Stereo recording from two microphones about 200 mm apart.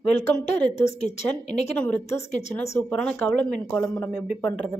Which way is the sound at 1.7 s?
5° left (ahead or behind).